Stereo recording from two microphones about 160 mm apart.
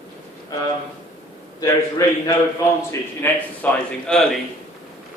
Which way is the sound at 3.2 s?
15° left (ahead or behind).